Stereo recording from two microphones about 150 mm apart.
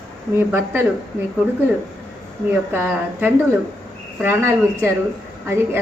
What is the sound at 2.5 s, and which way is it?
A woman's voice, 10° right (ahead or behind).